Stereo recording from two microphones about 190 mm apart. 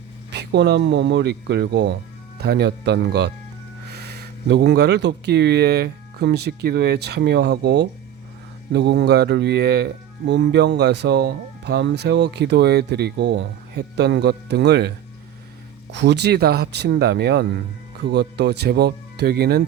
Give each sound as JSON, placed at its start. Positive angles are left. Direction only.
{"t": 0.3, "sound": "speech", "side_deg": -65}